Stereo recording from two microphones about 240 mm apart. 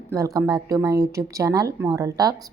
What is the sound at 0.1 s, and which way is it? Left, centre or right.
Speech, centre.